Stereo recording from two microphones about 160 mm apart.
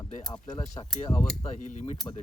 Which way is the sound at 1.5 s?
50° left (ahead or behind).